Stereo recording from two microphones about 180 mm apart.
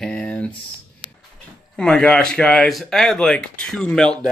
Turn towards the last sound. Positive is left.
turn(degrees=5)  # may be behind; listen again after turning